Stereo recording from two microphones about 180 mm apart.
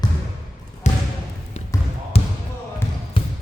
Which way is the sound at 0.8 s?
40° left (ahead or behind).